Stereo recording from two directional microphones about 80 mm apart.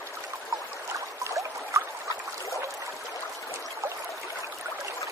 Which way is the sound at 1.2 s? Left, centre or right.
Right.